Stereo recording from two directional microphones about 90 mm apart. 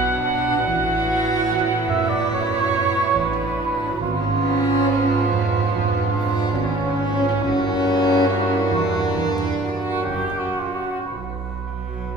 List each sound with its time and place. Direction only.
7.8 s music: 50° left (ahead or behind)